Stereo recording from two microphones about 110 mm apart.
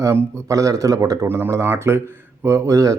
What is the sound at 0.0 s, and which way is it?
Speech, 25° right (ahead or behind).